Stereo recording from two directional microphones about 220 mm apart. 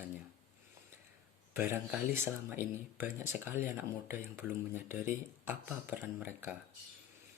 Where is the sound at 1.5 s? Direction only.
10° right (ahead or behind).